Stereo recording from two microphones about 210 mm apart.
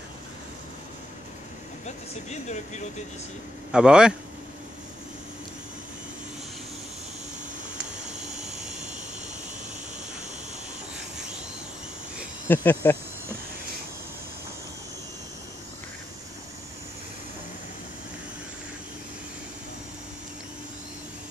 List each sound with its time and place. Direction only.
1.9 s speech: 35° left (ahead or behind)
3.7 s a man's voice: 5° right (ahead or behind)
12.4 s speech: 10° left (ahead or behind)